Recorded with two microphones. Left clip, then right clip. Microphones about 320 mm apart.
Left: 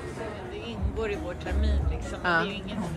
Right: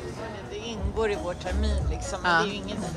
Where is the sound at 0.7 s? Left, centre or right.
Right.